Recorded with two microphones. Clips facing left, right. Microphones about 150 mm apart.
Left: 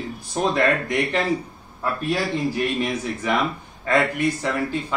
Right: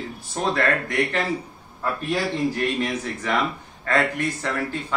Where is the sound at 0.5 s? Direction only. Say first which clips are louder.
Left 1 dB; 15° left (ahead or behind).